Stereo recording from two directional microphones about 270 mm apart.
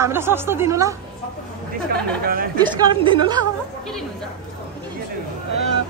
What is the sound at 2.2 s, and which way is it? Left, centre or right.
Speech, right.